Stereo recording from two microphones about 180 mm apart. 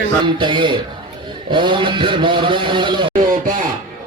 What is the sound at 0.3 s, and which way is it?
A man's voice, 25° right (ahead or behind).